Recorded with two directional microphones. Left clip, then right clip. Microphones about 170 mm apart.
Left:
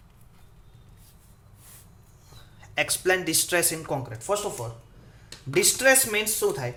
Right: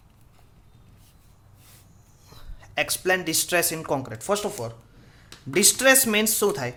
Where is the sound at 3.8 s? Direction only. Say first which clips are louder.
Right 3 dB; 35° right (ahead or behind).